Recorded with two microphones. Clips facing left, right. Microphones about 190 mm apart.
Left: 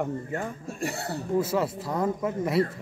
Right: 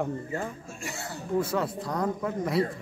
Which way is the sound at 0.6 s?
60° left (ahead or behind).